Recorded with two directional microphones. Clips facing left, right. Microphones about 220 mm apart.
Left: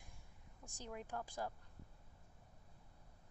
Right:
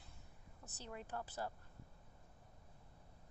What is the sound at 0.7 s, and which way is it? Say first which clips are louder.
Speech: left 1 dB; 10° left (ahead or behind).